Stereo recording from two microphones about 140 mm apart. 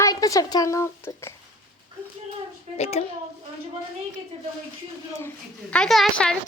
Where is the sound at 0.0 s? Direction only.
25° left (ahead or behind).